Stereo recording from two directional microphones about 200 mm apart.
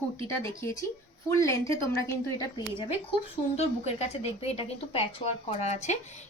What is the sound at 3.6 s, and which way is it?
A woman's voice, 30° left (ahead or behind).